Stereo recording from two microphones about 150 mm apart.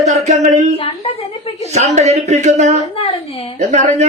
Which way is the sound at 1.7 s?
50° right (ahead or behind).